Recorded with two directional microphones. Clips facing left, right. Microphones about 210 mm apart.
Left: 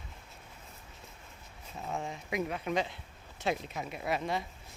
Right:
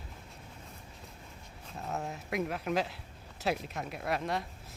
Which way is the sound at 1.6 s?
Centre (ahead or behind).